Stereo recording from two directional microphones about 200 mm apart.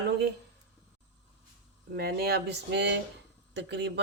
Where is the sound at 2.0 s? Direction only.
50° right (ahead or behind).